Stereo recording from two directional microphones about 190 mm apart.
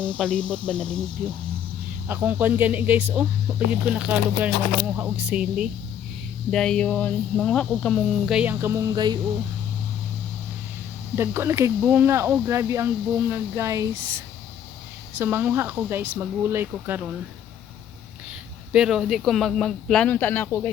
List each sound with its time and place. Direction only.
0.2 s speech: 5° left (ahead or behind)
1.2 s speech: 40° right (ahead or behind)
2.0 s speech: 10° right (ahead or behind)
6.5 s speech: 5° left (ahead or behind); by 9.1 s 20° right (ahead or behind)
11.1 s speech: 15° right (ahead or behind)
15.2 s speech: 10° right (ahead or behind)
18.7 s speech: 5° right (ahead or behind)